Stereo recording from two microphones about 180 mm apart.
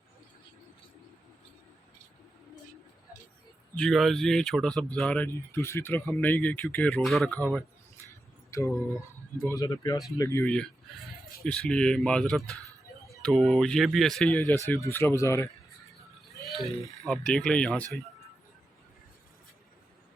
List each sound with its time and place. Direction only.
3.8 s speech: centre (ahead or behind)
8.4 s speech: 15° left (ahead or behind)
16.6 s speech: centre (ahead or behind)